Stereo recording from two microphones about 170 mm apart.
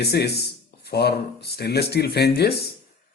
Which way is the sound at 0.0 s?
70° left (ahead or behind).